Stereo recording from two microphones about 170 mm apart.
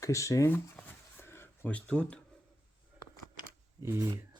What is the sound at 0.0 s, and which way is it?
Speech, 20° left (ahead or behind).